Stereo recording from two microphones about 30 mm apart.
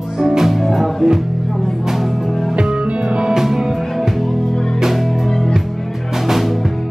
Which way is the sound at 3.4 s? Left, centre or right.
Centre.